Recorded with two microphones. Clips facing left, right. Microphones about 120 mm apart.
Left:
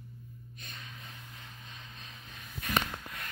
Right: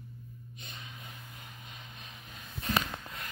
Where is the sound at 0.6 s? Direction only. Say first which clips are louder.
Even; 25° right (ahead or behind).